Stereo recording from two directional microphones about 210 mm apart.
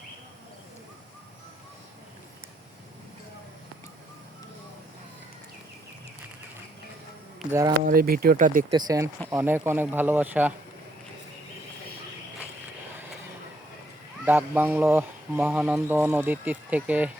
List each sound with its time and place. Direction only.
7.4 s speech: centre (ahead or behind)
7.8 s speech: 40° right (ahead or behind)
8.7 s speech: 15° right (ahead or behind)
14.3 s speech: 10° right (ahead or behind)